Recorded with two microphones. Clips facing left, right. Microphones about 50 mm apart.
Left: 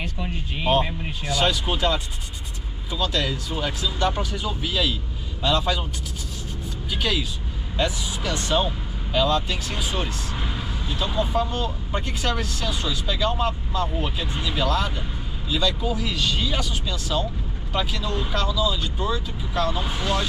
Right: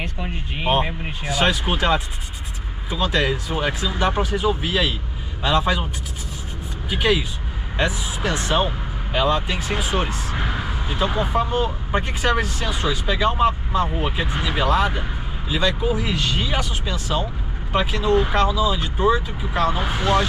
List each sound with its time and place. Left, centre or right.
0.0 s speech: centre
6.9 s speech: right